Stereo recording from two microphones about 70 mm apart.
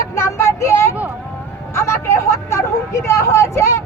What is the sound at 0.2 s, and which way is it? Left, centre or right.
Vehicle, left.